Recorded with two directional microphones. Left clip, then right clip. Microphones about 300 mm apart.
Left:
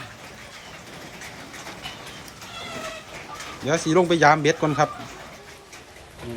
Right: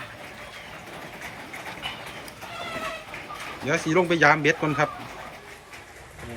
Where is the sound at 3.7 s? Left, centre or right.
Centre.